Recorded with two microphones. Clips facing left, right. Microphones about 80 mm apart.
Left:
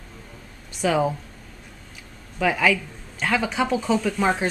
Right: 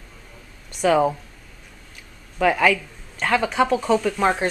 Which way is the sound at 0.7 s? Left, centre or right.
Centre.